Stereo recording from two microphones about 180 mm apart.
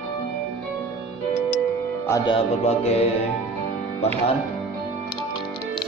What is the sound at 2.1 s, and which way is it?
Music, 30° left (ahead or behind).